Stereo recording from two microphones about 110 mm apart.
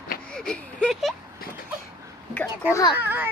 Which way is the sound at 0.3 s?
5° left (ahead or behind).